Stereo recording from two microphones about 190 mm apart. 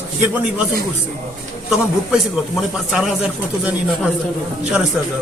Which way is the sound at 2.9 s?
5° right (ahead or behind).